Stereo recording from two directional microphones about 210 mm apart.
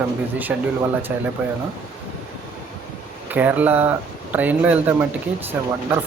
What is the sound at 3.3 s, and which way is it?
A man's voice, 10° right (ahead or behind).